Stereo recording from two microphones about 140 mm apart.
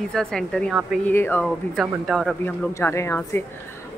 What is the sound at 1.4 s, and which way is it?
Speech, centre (ahead or behind).